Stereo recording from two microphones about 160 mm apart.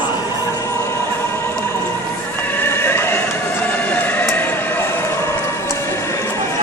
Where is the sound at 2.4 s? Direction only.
15° left (ahead or behind).